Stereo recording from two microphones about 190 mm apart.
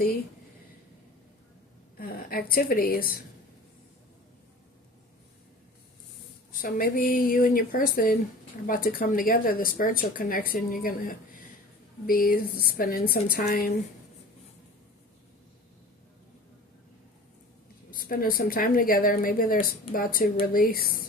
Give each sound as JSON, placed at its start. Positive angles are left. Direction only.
{"t": 2.0, "sound": "speech", "side_deg": 50}
{"t": 6.6, "sound": "speech", "side_deg": 50}
{"t": 12.0, "sound": "speech", "side_deg": 50}
{"t": 17.9, "sound": "speech", "side_deg": 50}